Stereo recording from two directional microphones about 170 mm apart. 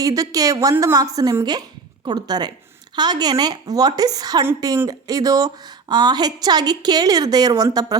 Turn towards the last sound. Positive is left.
turn(degrees=-20)  # may be behind; listen again after turning